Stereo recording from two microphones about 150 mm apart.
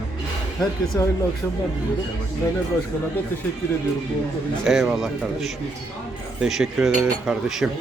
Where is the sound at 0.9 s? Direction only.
20° left (ahead or behind).